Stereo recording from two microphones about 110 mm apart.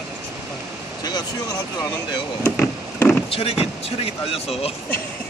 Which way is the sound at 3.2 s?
60° left (ahead or behind).